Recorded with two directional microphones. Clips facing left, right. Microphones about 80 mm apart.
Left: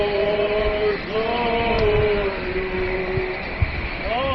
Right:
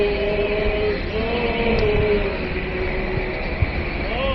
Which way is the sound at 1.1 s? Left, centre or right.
Left.